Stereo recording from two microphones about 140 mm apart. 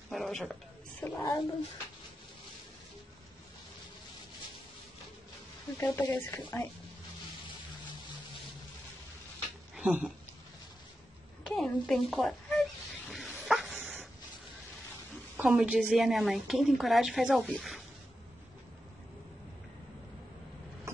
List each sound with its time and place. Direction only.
0.1 s a sound: centre (ahead or behind)
1.0 s speech: 15° left (ahead or behind)
5.8 s speech: 15° left (ahead or behind)
9.8 s speech: 5° right (ahead or behind)
11.4 s a sound: 5° left (ahead or behind)
15.3 s a woman's voice: 10° right (ahead or behind)